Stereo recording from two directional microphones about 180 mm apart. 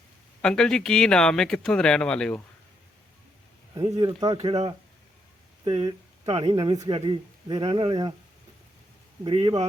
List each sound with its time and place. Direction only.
0.4 s speech: 5° left (ahead or behind)
3.8 s speech: 25° right (ahead or behind)
4.4 s speech: 35° right (ahead or behind)
9.2 s speech: 25° right (ahead or behind)